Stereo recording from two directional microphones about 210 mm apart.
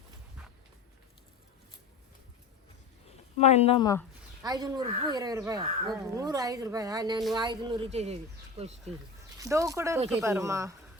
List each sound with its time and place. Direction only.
3.3 s speech: 30° left (ahead or behind)
4.4 s speech: 20° right (ahead or behind)
9.4 s speech: 15° right (ahead or behind)